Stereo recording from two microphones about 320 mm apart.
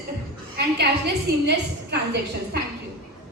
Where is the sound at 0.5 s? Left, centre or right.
Right.